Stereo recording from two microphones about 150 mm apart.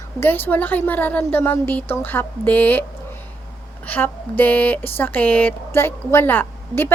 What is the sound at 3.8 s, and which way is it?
A woman's voice, 10° left (ahead or behind).